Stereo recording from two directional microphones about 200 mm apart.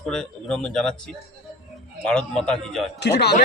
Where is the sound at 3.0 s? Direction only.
55° left (ahead or behind).